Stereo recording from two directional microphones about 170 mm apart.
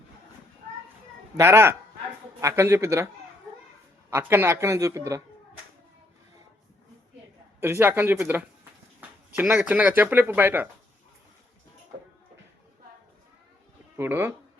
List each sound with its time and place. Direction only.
1.4 s speech: 15° right (ahead or behind)
4.1 s speech: 10° right (ahead or behind)
7.6 s speech: 15° right (ahead or behind)
13.9 s speech: 10° right (ahead or behind)